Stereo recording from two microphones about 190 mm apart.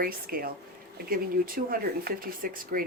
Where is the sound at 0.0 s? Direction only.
50° right (ahead or behind).